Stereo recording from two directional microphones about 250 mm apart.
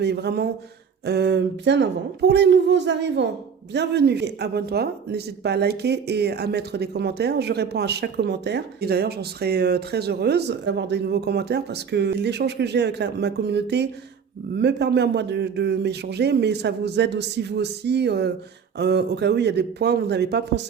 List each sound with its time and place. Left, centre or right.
0.0 s speech: right